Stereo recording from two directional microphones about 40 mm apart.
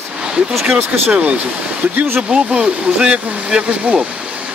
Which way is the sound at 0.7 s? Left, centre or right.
Right.